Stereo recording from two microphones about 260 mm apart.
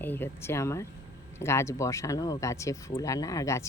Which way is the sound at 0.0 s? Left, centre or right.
Centre.